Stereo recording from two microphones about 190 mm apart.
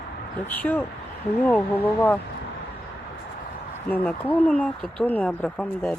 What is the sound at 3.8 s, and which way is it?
Speech, 10° left (ahead or behind).